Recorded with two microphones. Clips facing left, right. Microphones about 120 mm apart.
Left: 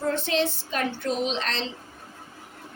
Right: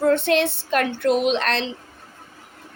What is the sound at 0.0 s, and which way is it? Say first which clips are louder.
Speech: right 7 dB; 65° right (ahead or behind).